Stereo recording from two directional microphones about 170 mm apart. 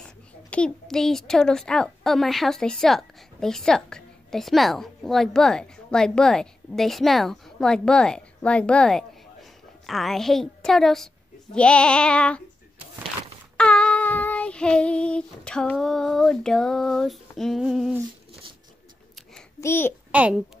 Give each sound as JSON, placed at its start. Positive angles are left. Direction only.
{"t": 0.0, "sound": "a child's voice", "side_deg": 5}
{"t": 11.5, "sound": "female singing", "side_deg": 5}
{"t": 13.6, "sound": "child singing", "side_deg": 5}
{"t": 19.6, "sound": "a child's voice", "side_deg": 15}
{"t": 20.1, "sound": "a woman's voice", "side_deg": -5}